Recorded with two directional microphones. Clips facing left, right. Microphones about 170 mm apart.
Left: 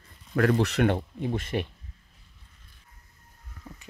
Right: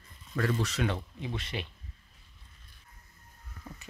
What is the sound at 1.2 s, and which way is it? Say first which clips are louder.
Speech: left 8 dB; 50° left (ahead or behind).